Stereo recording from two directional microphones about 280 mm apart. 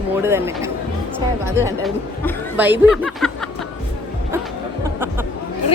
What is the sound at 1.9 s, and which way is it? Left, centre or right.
Speech, centre.